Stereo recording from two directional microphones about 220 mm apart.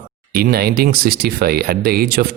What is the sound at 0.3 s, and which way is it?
Speech, 45° right (ahead or behind).